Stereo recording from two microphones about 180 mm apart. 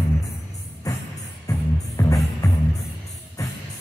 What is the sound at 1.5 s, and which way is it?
Music, 15° left (ahead or behind).